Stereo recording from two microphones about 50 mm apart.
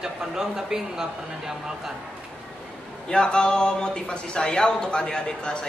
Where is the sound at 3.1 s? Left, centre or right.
Centre.